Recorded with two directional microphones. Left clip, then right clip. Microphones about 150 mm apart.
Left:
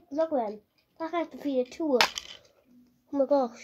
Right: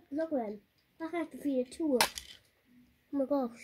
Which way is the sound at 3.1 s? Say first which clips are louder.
Left 8 dB; 30° right (ahead or behind).